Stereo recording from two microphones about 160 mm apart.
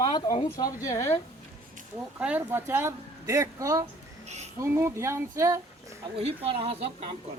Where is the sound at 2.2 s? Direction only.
10° right (ahead or behind).